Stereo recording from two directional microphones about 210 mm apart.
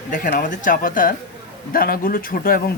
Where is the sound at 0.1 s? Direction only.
40° left (ahead or behind).